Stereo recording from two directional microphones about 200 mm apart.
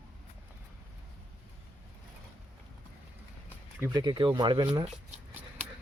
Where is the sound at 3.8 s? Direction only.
20° right (ahead or behind).